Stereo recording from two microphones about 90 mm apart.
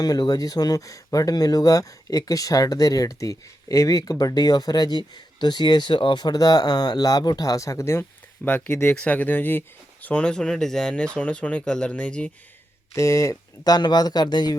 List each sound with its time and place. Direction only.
0.0 s speech: 45° left (ahead or behind); by 8.0 s 30° left (ahead or behind)
8.4 s speech: 15° left (ahead or behind)
9.0 s speech: 15° left (ahead or behind)
12.9 s speech: 35° left (ahead or behind); by 14.5 s 50° left (ahead or behind)